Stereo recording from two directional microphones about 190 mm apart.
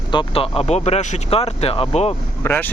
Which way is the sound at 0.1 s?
30° left (ahead or behind).